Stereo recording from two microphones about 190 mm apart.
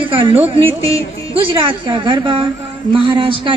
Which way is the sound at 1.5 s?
25° right (ahead or behind).